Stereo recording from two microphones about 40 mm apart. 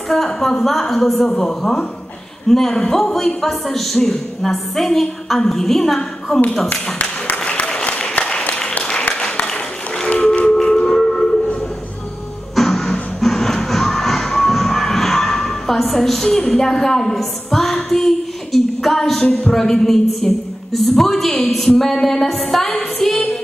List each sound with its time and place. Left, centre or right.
0.1 s a man's voice: centre
6.7 s a sound: left
7.4 s applause: left
10.3 s a sound: centre
12.5 s music: centre
17.2 s female singing: centre
19.5 s a man's voice: centre